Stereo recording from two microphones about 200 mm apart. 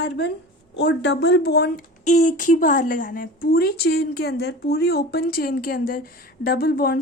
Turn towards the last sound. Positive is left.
turn(degrees=45)  # may be behind; listen again after turning